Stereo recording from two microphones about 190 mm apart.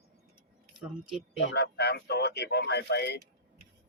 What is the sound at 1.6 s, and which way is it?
Speech, 60° left (ahead or behind).